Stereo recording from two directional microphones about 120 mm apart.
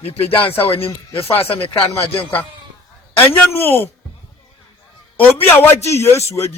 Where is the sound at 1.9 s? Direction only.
15° left (ahead or behind).